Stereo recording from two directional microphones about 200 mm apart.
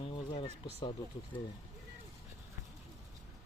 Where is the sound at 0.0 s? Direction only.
25° left (ahead or behind).